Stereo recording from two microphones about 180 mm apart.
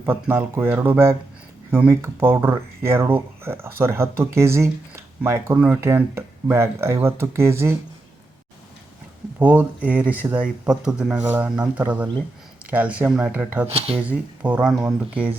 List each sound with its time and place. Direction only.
0.0 s speech: 10° right (ahead or behind)
9.4 s speech: 10° right (ahead or behind)
13.7 s speech: 35° right (ahead or behind)
14.0 s speech: 10° right (ahead or behind)